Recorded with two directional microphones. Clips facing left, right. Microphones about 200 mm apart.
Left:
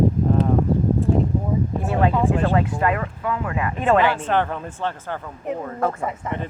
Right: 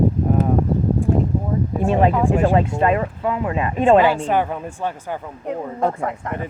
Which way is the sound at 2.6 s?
25° right (ahead or behind).